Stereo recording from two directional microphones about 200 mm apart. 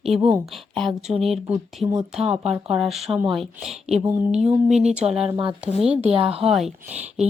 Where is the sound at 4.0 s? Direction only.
15° right (ahead or behind).